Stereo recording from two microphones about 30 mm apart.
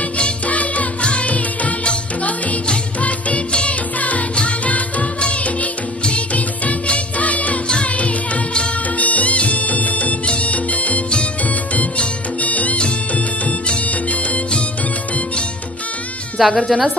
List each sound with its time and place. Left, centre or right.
0.5 s music: left
3.0 s music: left
5.3 s music of bollywood: left
7.2 s music: left
8.9 s music: left
10.2 s music: left
12.4 s music: left
12.7 s music: left
16.3 s a woman's voice: centre